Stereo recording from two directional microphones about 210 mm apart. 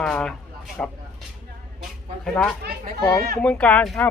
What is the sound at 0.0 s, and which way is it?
Speech, 5° left (ahead or behind).